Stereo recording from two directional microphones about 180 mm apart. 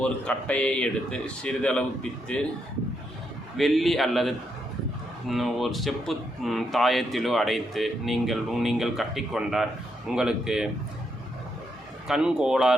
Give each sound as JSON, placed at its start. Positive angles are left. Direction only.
{"t": 0.0, "sound": "speech", "side_deg": 5}
{"t": 3.6, "sound": "speech", "side_deg": 0}
{"t": 12.0, "sound": "speech", "side_deg": -5}